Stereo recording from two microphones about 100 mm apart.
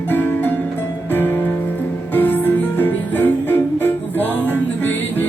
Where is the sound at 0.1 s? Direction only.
20° left (ahead or behind).